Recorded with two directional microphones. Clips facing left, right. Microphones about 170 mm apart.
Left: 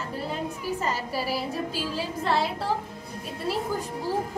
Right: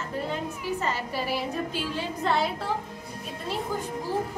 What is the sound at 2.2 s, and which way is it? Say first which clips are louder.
Music: even; 5° left (ahead or behind).